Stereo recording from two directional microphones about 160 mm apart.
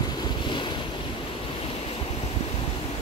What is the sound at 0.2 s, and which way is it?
Waves, 30° left (ahead or behind).